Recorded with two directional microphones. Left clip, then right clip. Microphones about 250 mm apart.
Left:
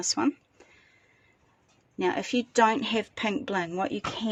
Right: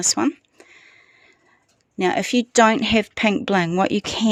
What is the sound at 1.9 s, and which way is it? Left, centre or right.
Speech, right.